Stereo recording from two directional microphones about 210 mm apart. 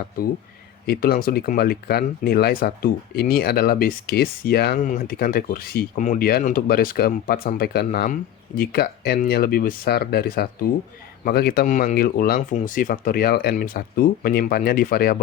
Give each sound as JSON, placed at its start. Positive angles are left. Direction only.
{"t": 0.9, "sound": "speech", "side_deg": 45}